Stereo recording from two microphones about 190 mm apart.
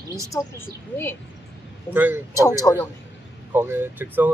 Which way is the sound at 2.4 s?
20° left (ahead or behind).